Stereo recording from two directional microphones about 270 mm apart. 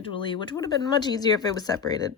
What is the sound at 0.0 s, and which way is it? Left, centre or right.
Speech, centre.